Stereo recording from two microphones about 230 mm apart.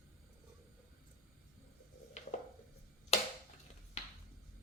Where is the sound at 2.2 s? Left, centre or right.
Left.